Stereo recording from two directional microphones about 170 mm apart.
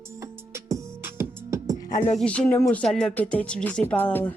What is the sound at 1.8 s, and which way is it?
Music, 45° left (ahead or behind).